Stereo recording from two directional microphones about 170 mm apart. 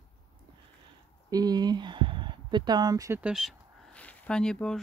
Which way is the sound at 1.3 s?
25° right (ahead or behind).